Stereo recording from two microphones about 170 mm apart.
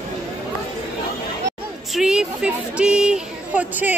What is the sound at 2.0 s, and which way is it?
A woman's voice, 5° right (ahead or behind).